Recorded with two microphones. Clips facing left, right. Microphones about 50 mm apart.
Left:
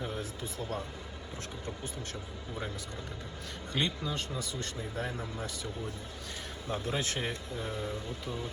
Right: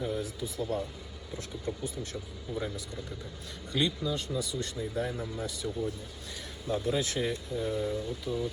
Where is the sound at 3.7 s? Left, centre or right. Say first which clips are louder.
Right 3 dB; left.